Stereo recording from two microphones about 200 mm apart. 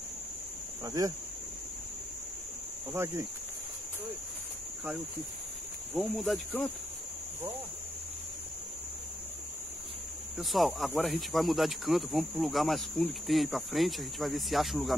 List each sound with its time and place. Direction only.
0.8 s speech: 15° right (ahead or behind)
2.9 s speech: 15° right (ahead or behind)
5.9 s speech: centre (ahead or behind)
10.4 s speech: centre (ahead or behind)